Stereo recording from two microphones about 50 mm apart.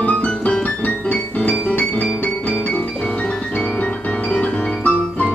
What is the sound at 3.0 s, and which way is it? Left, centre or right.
Piano, left.